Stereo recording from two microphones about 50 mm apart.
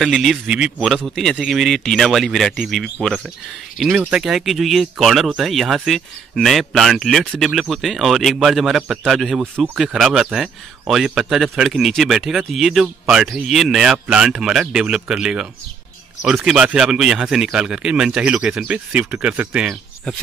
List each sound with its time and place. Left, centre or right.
0.0 s speech: centre
0.5 s a man's voice: centre
0.8 s speech: centre
3.9 s speech: right
4.2 s a man's voice: centre
13.9 s a man's voice: centre
16.4 s speech: centre